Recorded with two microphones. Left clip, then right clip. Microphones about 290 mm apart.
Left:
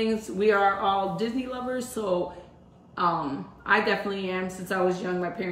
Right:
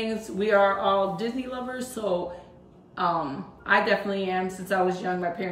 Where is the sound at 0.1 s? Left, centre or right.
Centre.